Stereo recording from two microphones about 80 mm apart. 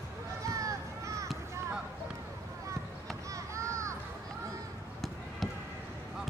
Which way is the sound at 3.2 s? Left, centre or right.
Right.